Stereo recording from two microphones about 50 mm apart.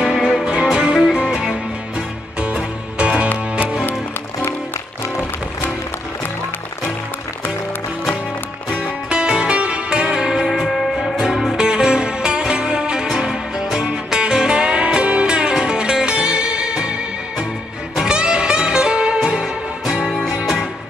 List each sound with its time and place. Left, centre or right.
0.0 s music: centre
9.1 s music: centre
11.5 s music: centre